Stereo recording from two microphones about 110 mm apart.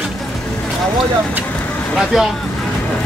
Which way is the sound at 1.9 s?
Centre (ahead or behind).